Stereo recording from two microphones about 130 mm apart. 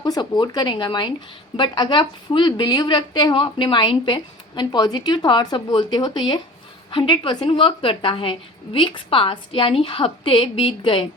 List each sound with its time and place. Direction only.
0.0 s a woman's voice: 35° left (ahead or behind)